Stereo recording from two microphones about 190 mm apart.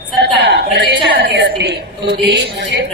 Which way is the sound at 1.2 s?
60° right (ahead or behind).